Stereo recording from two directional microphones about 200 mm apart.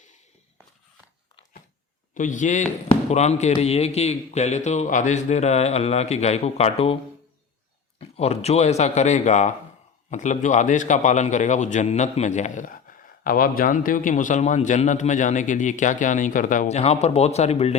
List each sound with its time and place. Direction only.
2.1 s a man's voice: 40° left (ahead or behind)
7.9 s a man's voice: 30° left (ahead or behind)